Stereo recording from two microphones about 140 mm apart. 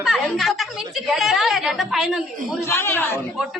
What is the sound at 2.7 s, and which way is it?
Speech, 20° left (ahead or behind).